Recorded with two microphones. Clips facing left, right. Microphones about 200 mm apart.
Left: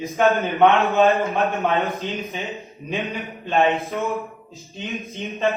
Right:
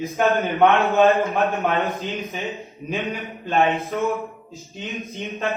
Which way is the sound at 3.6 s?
Centre (ahead or behind).